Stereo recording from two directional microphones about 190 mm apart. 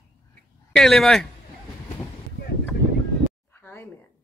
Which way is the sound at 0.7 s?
Centre (ahead or behind).